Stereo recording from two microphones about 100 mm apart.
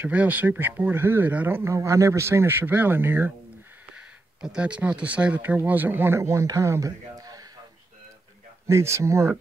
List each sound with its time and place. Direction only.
0.0 s speech: 15° right (ahead or behind)
1.7 s speech: 30° right (ahead or behind)
3.9 s speech: 10° right (ahead or behind); by 7.4 s 35° right (ahead or behind)
8.6 s speech: 30° right (ahead or behind)